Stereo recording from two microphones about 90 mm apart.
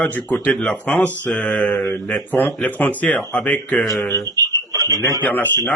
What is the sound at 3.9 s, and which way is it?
Speech, 35° left (ahead or behind).